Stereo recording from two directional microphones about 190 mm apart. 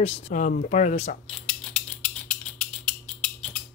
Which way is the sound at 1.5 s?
5° left (ahead or behind).